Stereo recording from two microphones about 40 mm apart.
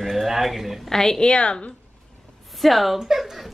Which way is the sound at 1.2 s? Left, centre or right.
Left.